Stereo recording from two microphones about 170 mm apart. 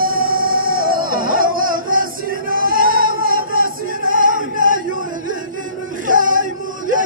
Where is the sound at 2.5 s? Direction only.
55° right (ahead or behind).